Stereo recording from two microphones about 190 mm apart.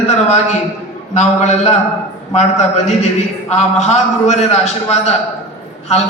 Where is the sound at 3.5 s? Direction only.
35° left (ahead or behind).